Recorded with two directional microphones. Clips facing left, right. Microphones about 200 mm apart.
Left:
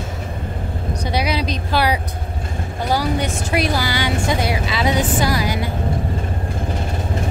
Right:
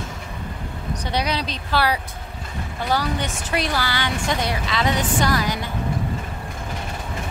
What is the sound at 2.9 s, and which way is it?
Speech, 10° left (ahead or behind).